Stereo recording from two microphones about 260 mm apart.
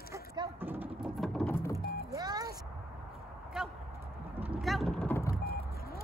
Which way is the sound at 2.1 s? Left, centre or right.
Centre.